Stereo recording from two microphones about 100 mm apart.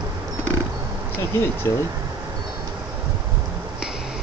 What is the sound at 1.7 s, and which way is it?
Speech, 30° left (ahead or behind).